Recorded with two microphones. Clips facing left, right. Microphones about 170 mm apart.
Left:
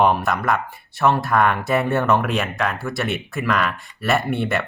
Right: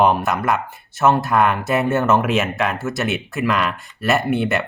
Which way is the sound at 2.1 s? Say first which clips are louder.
Right 2 dB; 20° right (ahead or behind).